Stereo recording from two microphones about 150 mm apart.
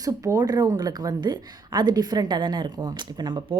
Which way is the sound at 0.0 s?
25° right (ahead or behind).